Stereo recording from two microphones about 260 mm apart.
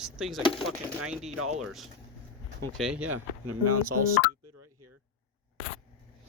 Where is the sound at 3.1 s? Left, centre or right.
Right.